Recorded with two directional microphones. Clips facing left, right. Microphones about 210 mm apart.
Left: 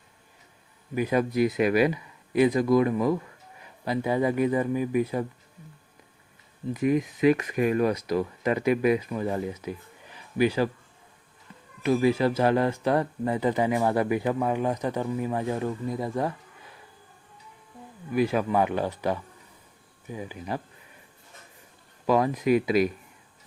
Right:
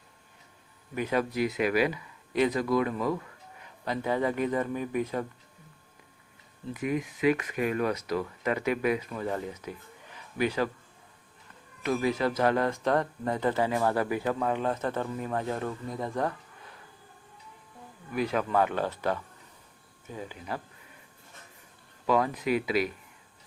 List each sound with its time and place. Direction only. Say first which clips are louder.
0.9 s speech: left 4 dB; 10° left (ahead or behind)
1.4 s speech: left 5 dB; 35° left (ahead or behind)
1.9 s speech: left 5 dB; 10° left (ahead or behind)
6.7 s speech: left 6 dB; 35° left (ahead or behind)
8.1 s speech: left 4 dB; 15° left (ahead or behind)
11.8 s speech: left 5 dB; 10° left (ahead or behind)
18.1 s speech: left 4 dB; 10° left (ahead or behind)
22.4 s speech: left 5 dB; 45° left (ahead or behind)